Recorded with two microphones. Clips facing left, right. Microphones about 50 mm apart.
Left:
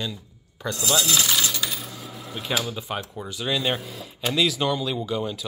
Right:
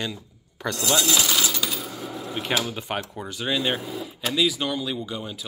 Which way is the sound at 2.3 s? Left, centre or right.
Right.